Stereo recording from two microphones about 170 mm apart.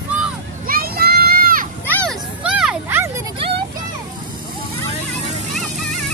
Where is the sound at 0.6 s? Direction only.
60° right (ahead or behind).